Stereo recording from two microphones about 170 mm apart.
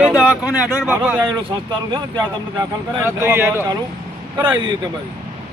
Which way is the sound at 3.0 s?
15° right (ahead or behind).